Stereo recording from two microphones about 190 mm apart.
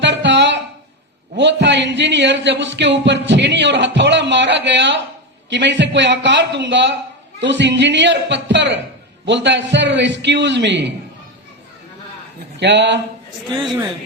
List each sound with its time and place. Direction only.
0.0 s a sound: 70° right (ahead or behind)
1.4 s speech: 65° right (ahead or behind)
12.5 s speech: 70° right (ahead or behind)